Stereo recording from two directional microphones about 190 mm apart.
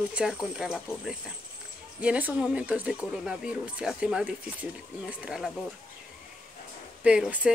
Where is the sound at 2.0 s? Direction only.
5° right (ahead or behind).